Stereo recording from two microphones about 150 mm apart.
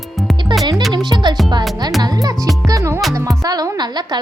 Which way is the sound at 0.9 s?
30° right (ahead or behind).